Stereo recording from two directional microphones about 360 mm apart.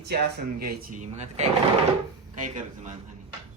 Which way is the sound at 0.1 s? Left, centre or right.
Right.